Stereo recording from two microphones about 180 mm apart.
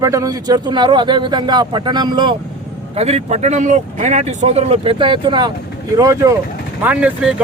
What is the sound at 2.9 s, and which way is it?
A man's voice, 35° right (ahead or behind).